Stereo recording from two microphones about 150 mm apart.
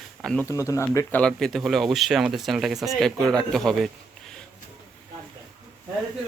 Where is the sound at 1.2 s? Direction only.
5° left (ahead or behind).